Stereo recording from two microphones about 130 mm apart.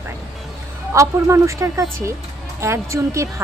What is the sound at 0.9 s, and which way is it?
Speech, 25° right (ahead or behind).